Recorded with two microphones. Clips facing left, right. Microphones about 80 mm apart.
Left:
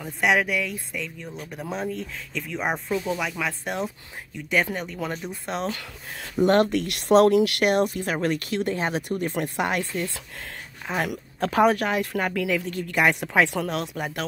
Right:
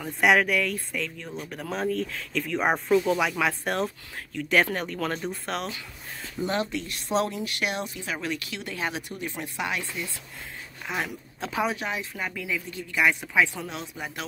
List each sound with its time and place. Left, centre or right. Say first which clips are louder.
0.0 s speech: right 1 dB; centre
6.3 s speech: left 9 dB; left
10.9 s speech: left 4 dB; left
11.3 s speech: left 8 dB; left
12.7 s speech: even; left